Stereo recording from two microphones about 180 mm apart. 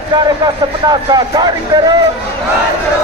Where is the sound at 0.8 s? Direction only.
20° right (ahead or behind).